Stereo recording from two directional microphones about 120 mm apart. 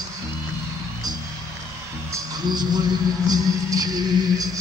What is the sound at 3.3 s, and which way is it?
Music, 30° right (ahead or behind).